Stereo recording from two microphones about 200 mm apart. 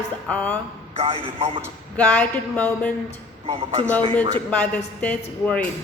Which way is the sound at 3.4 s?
30° right (ahead or behind).